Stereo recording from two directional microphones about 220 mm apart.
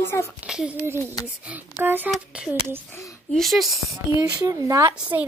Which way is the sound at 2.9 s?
15° left (ahead or behind).